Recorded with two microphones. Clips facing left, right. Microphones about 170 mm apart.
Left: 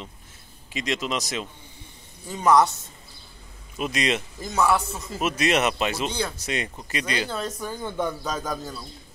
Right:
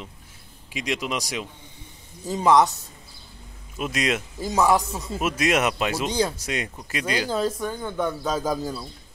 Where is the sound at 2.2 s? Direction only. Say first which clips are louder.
Right 1 dB; 30° right (ahead or behind).